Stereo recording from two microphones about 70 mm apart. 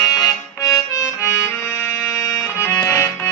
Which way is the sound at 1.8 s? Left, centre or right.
Left.